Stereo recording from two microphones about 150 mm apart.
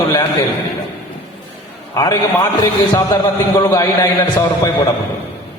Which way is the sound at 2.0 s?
25° left (ahead or behind).